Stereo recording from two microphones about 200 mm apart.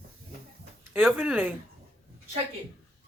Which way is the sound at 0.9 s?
5° right (ahead or behind).